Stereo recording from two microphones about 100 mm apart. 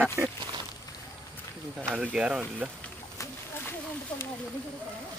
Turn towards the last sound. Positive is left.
turn(degrees=25)  # may be behind; listen again after turning